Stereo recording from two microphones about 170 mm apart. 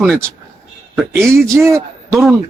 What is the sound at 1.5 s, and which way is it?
Speech, 15° right (ahead or behind).